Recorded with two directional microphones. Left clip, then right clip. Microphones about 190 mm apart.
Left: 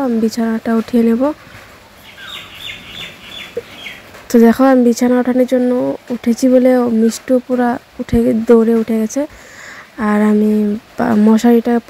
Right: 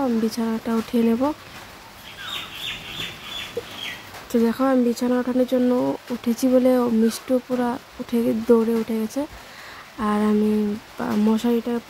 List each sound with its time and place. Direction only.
0.0 s speech: 20° left (ahead or behind)
4.3 s speech: 30° left (ahead or behind)